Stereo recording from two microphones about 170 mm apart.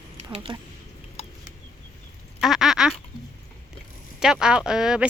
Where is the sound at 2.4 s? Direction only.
Centre (ahead or behind).